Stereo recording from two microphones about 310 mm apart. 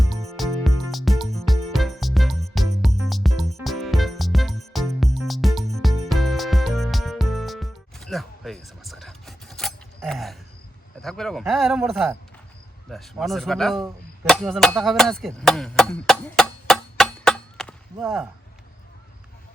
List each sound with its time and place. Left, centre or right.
0.0 s music: centre
11.0 s speech: centre
14.3 s chopping: centre